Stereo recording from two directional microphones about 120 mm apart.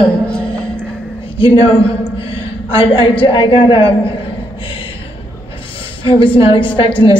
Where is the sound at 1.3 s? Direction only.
50° left (ahead or behind).